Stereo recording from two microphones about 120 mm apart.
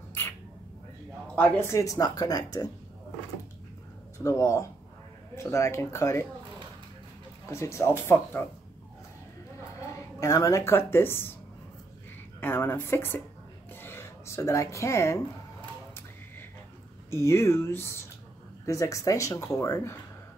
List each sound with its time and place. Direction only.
1.2 s a sound: 10° left (ahead or behind)
1.7 s speech: 25° left (ahead or behind)
4.2 s speech: 25° left (ahead or behind)
7.4 s speech: 25° left (ahead or behind)
9.9 s speech: 25° left (ahead or behind)
12.4 s speech: 20° left (ahead or behind)
17.1 s speech: 25° left (ahead or behind)